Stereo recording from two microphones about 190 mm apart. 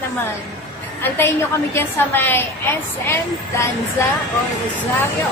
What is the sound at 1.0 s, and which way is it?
A woman's voice, 10° left (ahead or behind).